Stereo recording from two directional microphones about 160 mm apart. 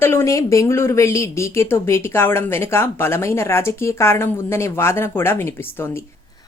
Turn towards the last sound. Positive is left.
turn(degrees=15)  # may be behind; listen again after turning